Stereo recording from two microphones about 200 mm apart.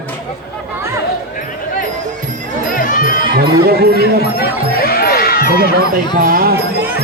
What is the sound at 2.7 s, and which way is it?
Music, 45° left (ahead or behind).